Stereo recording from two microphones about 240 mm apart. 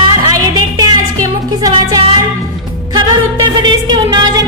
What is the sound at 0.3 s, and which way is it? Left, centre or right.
Music, centre.